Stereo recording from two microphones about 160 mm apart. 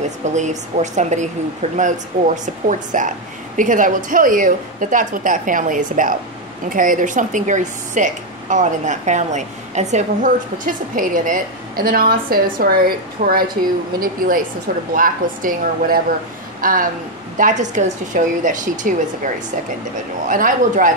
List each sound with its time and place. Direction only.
0.2 s a woman's voice: 50° right (ahead or behind)